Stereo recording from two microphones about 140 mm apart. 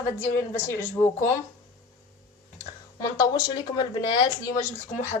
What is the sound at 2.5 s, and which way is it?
Speech, 25° left (ahead or behind).